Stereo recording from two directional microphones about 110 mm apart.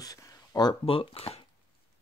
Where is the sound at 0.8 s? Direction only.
60° left (ahead or behind).